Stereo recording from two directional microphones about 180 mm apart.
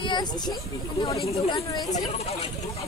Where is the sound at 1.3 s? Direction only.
35° left (ahead or behind).